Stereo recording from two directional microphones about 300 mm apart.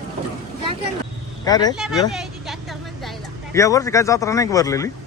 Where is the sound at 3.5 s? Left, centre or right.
Centre.